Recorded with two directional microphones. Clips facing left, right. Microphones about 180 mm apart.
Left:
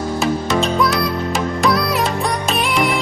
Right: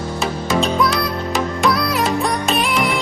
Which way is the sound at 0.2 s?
Centre (ahead or behind).